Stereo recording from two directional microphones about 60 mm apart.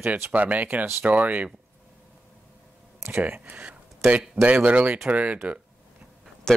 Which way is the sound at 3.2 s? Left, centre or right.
Right.